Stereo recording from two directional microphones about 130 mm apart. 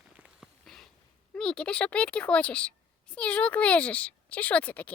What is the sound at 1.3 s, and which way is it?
A woman's voice, 5° left (ahead or behind).